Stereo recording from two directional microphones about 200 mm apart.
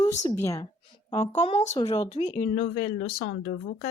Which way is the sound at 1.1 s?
35° left (ahead or behind).